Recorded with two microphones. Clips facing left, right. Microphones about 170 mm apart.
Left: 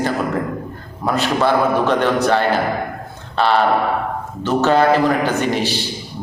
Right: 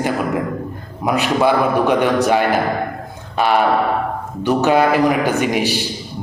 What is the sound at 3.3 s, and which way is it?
A man's voice, 10° right (ahead or behind).